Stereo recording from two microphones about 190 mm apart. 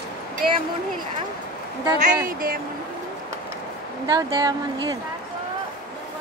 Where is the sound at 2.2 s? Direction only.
50° right (ahead or behind).